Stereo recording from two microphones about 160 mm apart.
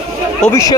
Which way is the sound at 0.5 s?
20° left (ahead or behind).